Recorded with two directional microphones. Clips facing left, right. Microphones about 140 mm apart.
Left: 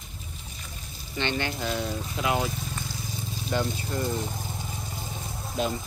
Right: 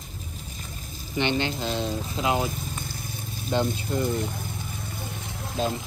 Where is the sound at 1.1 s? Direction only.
20° right (ahead or behind).